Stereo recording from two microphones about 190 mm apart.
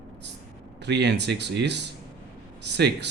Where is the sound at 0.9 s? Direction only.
65° right (ahead or behind).